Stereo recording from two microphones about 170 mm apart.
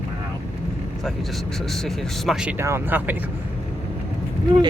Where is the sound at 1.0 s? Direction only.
Centre (ahead or behind).